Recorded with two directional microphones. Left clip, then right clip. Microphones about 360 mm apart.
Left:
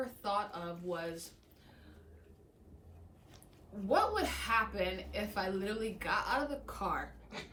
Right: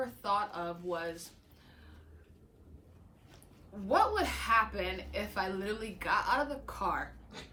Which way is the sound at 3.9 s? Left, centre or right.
Centre.